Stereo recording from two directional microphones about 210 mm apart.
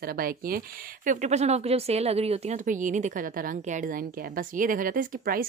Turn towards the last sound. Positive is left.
turn(degrees=-40)  # may be behind; listen again after turning